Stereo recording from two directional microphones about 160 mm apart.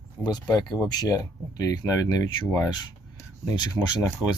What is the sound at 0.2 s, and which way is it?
Speech, 25° left (ahead or behind).